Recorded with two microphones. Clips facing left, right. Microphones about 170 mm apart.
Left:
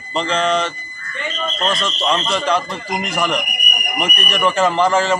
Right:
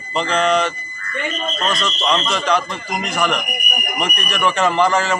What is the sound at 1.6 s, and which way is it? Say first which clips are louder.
Speech: left 1 dB; 30° left (ahead or behind).